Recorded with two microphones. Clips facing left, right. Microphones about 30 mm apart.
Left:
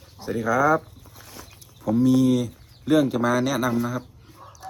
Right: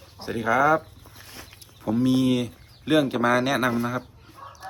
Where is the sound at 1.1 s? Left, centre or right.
Right.